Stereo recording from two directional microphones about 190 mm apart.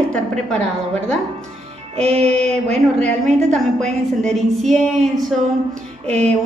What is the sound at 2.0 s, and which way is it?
Music, 30° right (ahead or behind).